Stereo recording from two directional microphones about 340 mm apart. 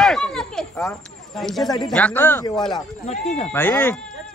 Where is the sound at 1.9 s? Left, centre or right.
Centre.